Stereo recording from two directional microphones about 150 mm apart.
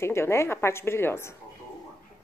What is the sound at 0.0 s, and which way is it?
A woman's voice, 15° left (ahead or behind).